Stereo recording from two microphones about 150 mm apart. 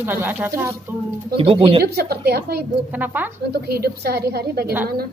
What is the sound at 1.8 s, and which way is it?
Speech, 90° right.